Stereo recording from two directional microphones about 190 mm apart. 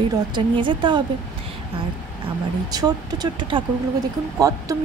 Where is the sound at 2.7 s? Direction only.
20° right (ahead or behind).